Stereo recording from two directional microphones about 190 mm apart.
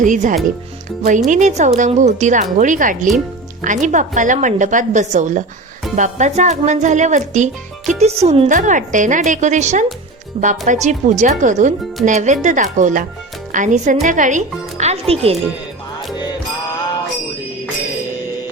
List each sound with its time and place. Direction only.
0.0 s speech: 40° right (ahead or behind)
10.3 s speech: 30° right (ahead or behind)